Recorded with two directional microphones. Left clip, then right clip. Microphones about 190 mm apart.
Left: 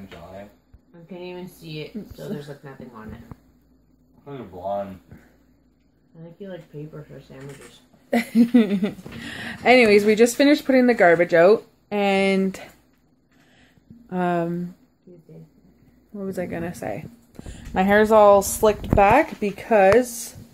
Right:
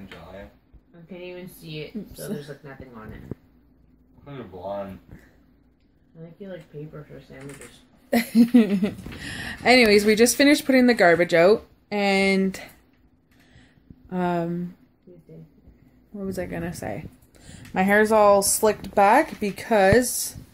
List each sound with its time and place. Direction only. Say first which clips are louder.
1.1 s a sound: left 2 dB; 40° left (ahead or behind)
8.1 s speech: even; 15° right (ahead or behind)
14.0 s a woman's voice: left 2 dB; centre (ahead or behind)
16.1 s a woman's voice: left 2 dB; centre (ahead or behind)